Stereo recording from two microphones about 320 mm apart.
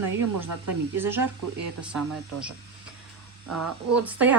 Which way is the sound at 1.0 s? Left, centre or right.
Centre.